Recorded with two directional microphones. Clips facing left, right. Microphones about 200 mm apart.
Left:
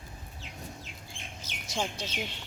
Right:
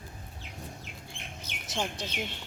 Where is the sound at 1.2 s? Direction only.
60° right (ahead or behind).